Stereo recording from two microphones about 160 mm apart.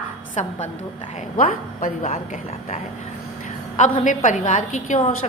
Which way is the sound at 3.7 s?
50° left (ahead or behind).